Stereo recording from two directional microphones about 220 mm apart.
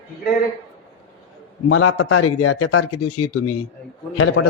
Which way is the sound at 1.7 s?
90° left.